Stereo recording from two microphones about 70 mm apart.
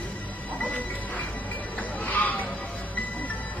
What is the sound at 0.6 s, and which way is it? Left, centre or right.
Music, left.